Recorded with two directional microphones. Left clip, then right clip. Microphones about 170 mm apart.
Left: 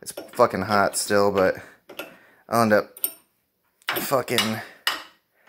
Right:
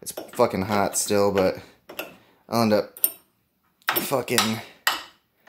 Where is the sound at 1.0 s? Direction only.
5° left (ahead or behind).